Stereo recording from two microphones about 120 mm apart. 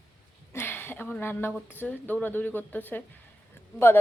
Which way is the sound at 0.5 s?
20° left (ahead or behind).